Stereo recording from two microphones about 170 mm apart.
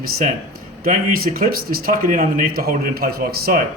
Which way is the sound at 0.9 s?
60° right (ahead or behind).